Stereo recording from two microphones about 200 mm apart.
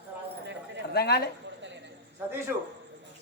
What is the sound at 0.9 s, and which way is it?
Speech, 55° left (ahead or behind).